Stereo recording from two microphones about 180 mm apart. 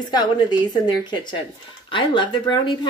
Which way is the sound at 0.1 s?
25° left (ahead or behind).